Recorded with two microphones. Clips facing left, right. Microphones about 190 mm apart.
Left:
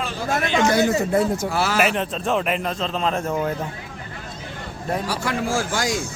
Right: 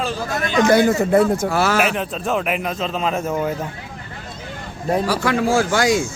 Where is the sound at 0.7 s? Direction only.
55° right (ahead or behind).